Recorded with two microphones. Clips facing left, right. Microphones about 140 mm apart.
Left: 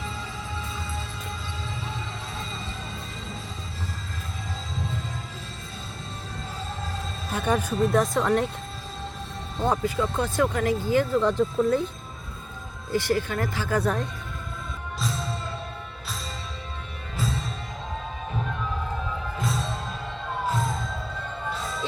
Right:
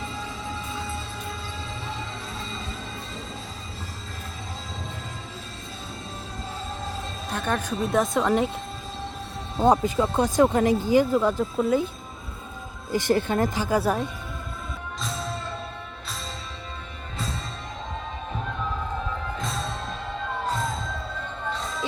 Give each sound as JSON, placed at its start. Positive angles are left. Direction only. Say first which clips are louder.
{"t": 7.3, "sound": "speech", "louder": "left 2 dB", "side_deg": 10}
{"t": 7.8, "sound": "speech", "louder": "right 1 dB", "side_deg": 0}
{"t": 9.8, "sound": "speech", "louder": "right 3 dB", "side_deg": -20}
{"t": 12.9, "sound": "speech", "louder": "right 2 dB", "side_deg": -20}